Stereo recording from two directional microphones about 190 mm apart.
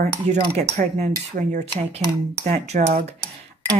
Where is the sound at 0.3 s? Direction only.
40° right (ahead or behind).